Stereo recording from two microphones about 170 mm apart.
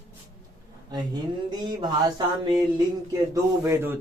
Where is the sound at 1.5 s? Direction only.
25° right (ahead or behind).